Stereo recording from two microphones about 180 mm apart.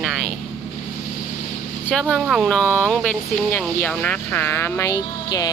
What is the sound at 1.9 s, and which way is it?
Speech, centre (ahead or behind).